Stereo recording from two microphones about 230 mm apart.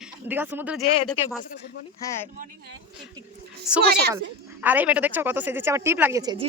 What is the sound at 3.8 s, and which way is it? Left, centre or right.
Speech, right.